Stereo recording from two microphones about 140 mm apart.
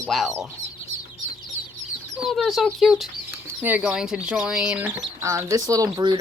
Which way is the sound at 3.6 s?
10° right (ahead or behind).